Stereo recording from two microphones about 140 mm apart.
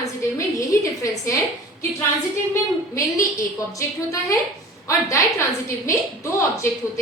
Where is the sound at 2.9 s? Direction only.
20° left (ahead or behind).